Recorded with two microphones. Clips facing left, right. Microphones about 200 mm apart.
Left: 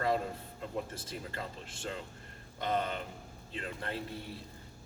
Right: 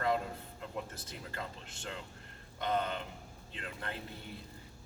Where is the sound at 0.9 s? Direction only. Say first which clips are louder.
Left 3 dB; 25° left (ahead or behind).